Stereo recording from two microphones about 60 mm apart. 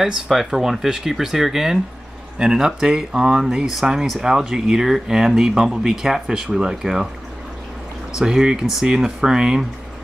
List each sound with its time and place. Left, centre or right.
0.0 s speech: centre
8.2 s speech: centre